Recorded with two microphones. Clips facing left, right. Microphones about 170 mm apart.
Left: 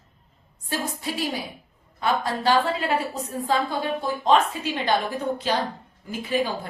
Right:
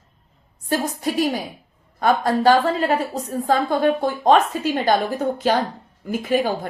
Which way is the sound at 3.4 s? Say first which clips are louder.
Right 7 dB; 50° right (ahead or behind).